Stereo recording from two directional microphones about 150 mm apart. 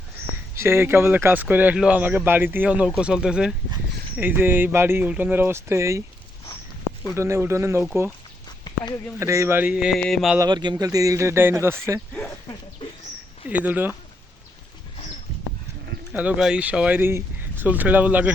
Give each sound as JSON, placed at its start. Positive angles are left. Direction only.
{"t": 0.5, "sound": "speech", "side_deg": -15}
{"t": 7.2, "sound": "speech", "side_deg": -20}
{"t": 8.4, "sound": "a sound", "side_deg": 30}
{"t": 9.1, "sound": "speech", "side_deg": -20}
{"t": 10.0, "sound": "a sound", "side_deg": 0}
{"t": 10.3, "sound": "speech", "side_deg": -25}
{"t": 13.5, "sound": "speech", "side_deg": -10}
{"t": 16.1, "sound": "speech", "side_deg": -5}